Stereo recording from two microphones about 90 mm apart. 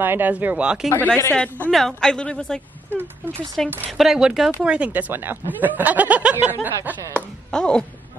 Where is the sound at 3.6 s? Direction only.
5° left (ahead or behind); by 5.0 s 15° right (ahead or behind).